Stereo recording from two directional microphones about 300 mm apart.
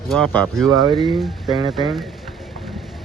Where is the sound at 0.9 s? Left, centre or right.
Centre.